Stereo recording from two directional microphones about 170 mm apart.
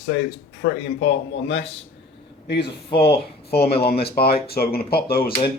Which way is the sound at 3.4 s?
70° left (ahead or behind).